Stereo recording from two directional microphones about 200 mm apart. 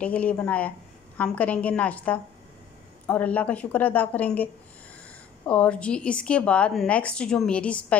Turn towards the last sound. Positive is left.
turn(degrees=5)  # may be behind; listen again after turning